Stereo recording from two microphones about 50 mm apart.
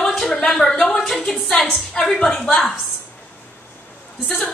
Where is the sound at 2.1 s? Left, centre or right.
Centre.